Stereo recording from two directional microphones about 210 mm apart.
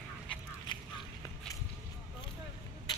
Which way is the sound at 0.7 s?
20° left (ahead or behind).